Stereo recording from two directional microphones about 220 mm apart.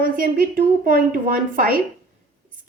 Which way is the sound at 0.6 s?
40° right (ahead or behind).